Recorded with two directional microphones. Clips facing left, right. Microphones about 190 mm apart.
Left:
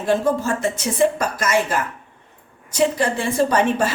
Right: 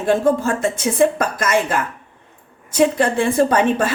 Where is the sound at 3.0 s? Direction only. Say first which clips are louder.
Right 4 dB; 55° right (ahead or behind).